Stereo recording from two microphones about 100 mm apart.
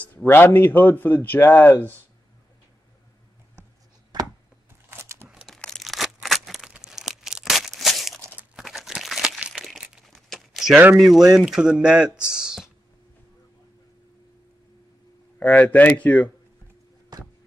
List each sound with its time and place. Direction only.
0.0 s a man's voice: 20° left (ahead or behind)
4.1 s chopping: 45° right (ahead or behind)
4.9 s crumpling: 25° right (ahead or behind)
5.3 s crumpling: 5° right (ahead or behind)
6.2 s tearing: centre (ahead or behind)
8.6 s crumpling: 5° right (ahead or behind)
10.1 s a sound: centre (ahead or behind)
11.0 s speech: 5° right (ahead or behind)
15.3 s speech: 15° left (ahead or behind)